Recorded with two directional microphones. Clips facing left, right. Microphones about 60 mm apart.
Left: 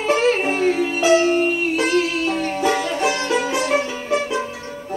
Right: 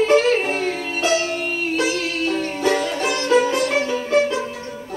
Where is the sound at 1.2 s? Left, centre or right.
Left.